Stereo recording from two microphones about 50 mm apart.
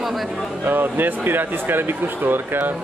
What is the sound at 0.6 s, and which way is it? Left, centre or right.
Speech, right.